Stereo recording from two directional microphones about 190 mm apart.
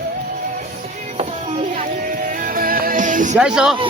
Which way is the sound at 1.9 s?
50° right (ahead or behind).